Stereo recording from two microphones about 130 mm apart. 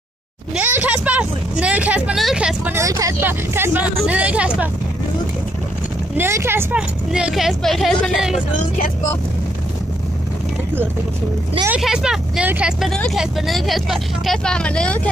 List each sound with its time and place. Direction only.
0.6 s vehicle: 15° right (ahead or behind)
2.7 s speech: 25° right (ahead or behind)
6.1 s speech: 20° right (ahead or behind)
7.1 s speech: 5° right (ahead or behind)
11.7 s speech: 5° right (ahead or behind)
12.9 s speech: 5° left (ahead or behind)